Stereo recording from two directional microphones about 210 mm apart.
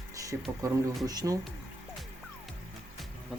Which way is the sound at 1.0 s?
15° right (ahead or behind).